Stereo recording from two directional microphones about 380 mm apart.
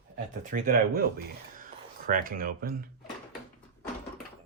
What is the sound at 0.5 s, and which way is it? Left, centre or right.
Speech, right.